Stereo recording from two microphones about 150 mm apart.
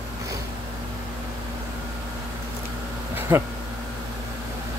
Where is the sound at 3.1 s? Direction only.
15° right (ahead or behind).